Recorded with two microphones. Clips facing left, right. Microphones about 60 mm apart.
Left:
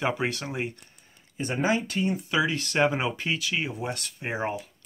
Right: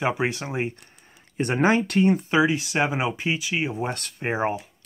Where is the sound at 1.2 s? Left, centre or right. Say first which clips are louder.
Right 6 dB; right.